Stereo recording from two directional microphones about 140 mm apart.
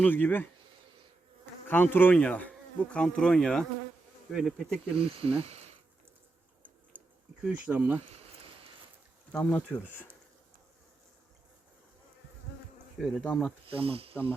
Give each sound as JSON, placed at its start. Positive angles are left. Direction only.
{"t": 0.0, "sound": "insect", "side_deg": 15}
{"t": 1.6, "sound": "insect", "side_deg": 15}
{"t": 2.9, "sound": "speech", "side_deg": 5}
{"t": 4.9, "sound": "speech", "side_deg": -45}
{"t": 6.9, "sound": "bee", "side_deg": -15}
{"t": 7.4, "sound": "speech", "side_deg": -10}
{"t": 8.0, "sound": "a sound", "side_deg": -45}
{"t": 9.3, "sound": "insect", "side_deg": 10}
{"t": 13.0, "sound": "speech", "side_deg": -5}
{"t": 13.7, "sound": "speech", "side_deg": -40}